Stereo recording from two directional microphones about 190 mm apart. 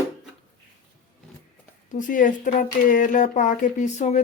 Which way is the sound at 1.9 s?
45° left (ahead or behind).